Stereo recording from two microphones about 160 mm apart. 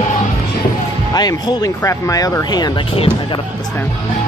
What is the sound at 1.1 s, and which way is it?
Speech, 25° left (ahead or behind).